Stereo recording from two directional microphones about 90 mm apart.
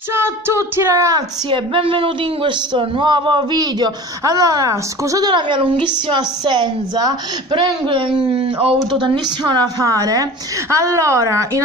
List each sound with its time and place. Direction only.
0.1 s female singing: 25° right (ahead or behind)
1.5 s speech: 80° right; by 5.3 s 40° right (ahead or behind)
5.3 s a woman's voice: 60° right (ahead or behind); by 11.6 s 35° right (ahead or behind)